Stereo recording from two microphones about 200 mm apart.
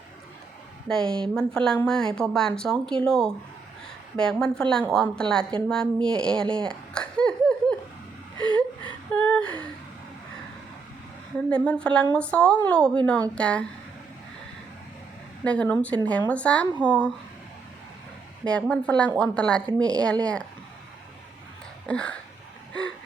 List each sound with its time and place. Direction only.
0.9 s speech: 5° left (ahead or behind)
5.6 s a sound: 5° left (ahead or behind)
8.4 s a sound: 25° right (ahead or behind)
9.1 s speech: 5° left (ahead or behind)
11.4 s speech: 5° left (ahead or behind)
15.4 s speech: 5° left (ahead or behind)
18.4 s speech: 5° left (ahead or behind)
21.8 s speech: 5° left (ahead or behind)